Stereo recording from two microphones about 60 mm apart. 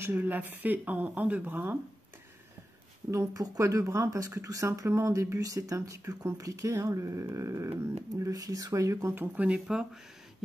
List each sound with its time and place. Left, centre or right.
0.0 s speech: right
3.1 s speech: right
8.2 s speech: right
9.3 s speech: right